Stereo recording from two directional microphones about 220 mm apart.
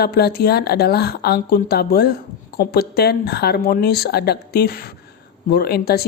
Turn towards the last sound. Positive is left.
turn(degrees=45)  # may be behind; listen again after turning